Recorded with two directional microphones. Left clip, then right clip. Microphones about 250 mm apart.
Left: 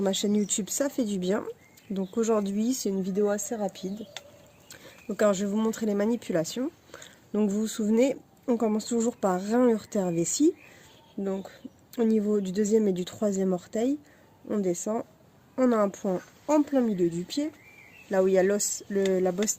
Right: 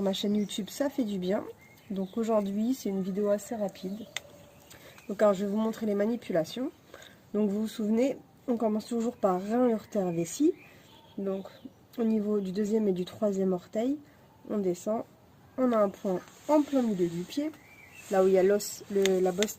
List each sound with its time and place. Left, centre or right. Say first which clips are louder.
0.0 s speech: left 3 dB; left